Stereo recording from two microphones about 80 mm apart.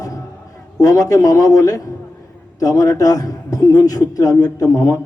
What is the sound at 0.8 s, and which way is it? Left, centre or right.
A man's voice, left.